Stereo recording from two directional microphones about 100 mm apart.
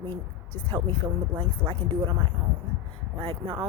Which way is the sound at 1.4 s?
55° right (ahead or behind).